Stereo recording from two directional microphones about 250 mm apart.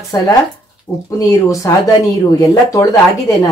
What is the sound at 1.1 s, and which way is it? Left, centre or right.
Speech, centre.